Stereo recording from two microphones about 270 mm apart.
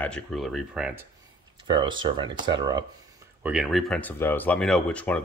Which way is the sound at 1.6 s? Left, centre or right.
Centre.